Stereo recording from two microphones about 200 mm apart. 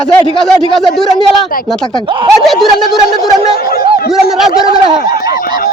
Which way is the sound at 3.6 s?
50° left (ahead or behind).